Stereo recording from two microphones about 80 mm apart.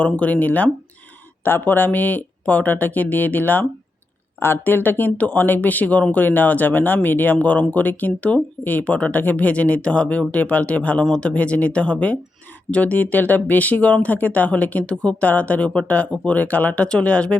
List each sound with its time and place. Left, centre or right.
0.0 s speech: centre